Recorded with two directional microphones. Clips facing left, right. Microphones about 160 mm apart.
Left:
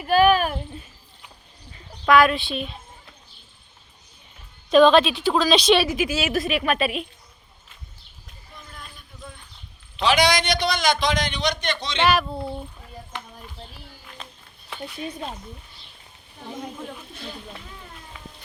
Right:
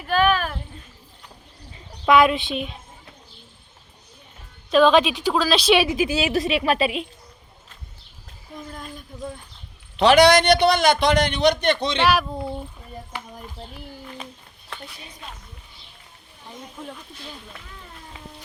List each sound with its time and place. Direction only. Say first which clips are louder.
0.1 s a sound: left 3 dB; 10° left (ahead or behind)
2.0 s a woman's voice: right 1 dB; 20° right (ahead or behind)
4.7 s a woman's voice: left 1 dB; 5° right (ahead or behind)
5.3 s speech: left 1 dB; centre (ahead or behind)
6.0 s a woman's voice: right 2 dB; 30° right (ahead or behind)
8.5 s a sound: right 9 dB; 45° right (ahead or behind)
10.0 s a man's voice: right 6 dB; 60° right (ahead or behind)
11.9 s a woman's voice: left 2 dB; 10° right (ahead or behind)